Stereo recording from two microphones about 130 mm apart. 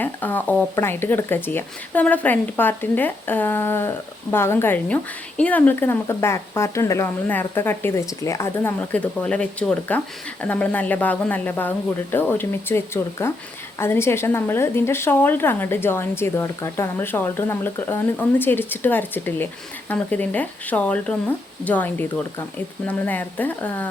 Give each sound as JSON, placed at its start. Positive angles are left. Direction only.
{"t": 0.0, "sound": "a woman's voice", "side_deg": 15}